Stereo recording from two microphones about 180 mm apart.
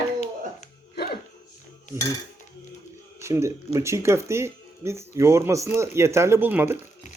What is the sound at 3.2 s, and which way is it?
Speech, 15° right (ahead or behind).